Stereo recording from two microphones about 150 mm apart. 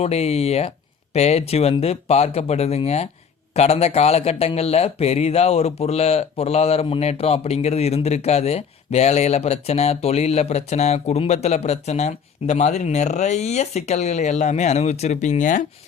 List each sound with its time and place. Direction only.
0.0 s speech: 45° left (ahead or behind)